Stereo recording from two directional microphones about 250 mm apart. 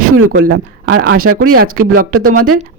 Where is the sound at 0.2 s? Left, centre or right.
Right.